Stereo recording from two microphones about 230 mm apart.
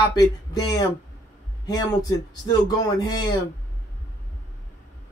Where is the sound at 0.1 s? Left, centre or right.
Centre.